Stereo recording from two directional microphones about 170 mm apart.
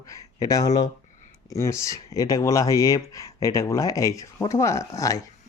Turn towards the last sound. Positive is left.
turn(degrees=20)  # may be behind; listen again after turning